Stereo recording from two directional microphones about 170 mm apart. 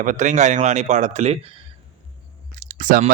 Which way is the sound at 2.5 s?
50° right (ahead or behind).